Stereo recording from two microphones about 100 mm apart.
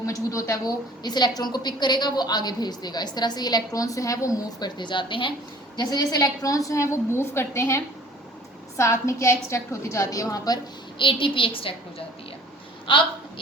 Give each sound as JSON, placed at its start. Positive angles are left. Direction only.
{"t": 0.0, "sound": "a woman's voice", "side_deg": 35}
{"t": 5.7, "sound": "a woman's voice", "side_deg": 45}
{"t": 10.9, "sound": "a woman's voice", "side_deg": 55}